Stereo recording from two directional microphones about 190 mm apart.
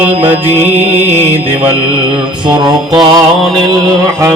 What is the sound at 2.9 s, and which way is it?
Mantra, 25° right (ahead or behind).